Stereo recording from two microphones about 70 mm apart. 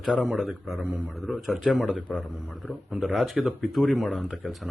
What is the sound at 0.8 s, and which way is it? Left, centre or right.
Speech, centre.